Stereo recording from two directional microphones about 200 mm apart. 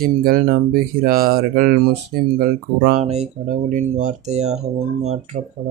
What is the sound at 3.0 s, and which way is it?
Speech, 35° right (ahead or behind).